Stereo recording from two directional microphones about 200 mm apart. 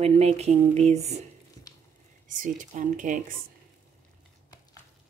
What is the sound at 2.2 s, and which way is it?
Speech, 40° right (ahead or behind).